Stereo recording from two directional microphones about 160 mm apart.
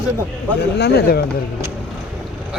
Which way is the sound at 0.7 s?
85° left.